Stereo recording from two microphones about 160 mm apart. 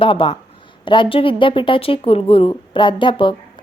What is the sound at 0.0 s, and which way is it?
Speech, 30° left (ahead or behind).